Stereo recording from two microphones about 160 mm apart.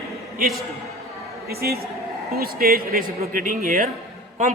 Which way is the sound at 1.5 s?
80° right.